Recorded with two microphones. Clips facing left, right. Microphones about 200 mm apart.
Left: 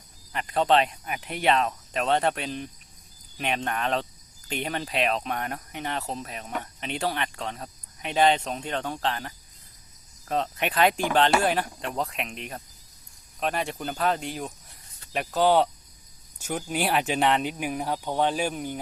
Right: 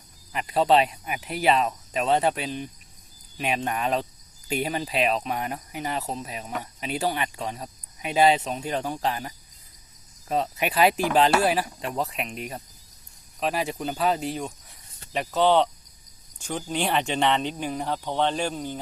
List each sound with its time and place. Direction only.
0.3 s speech: 5° right (ahead or behind); by 18.8 s 10° left (ahead or behind)